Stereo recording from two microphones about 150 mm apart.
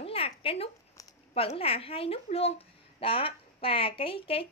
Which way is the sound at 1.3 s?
40° left (ahead or behind).